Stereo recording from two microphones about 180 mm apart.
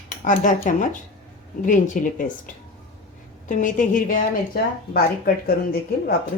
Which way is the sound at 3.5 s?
45° left (ahead or behind).